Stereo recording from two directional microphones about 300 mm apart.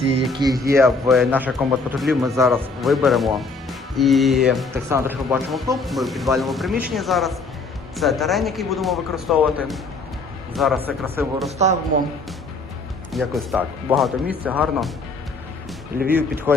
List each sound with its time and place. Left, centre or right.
0.3 s speech: centre
11.5 s speech: right
13.1 s speech: centre
16.1 s speech: centre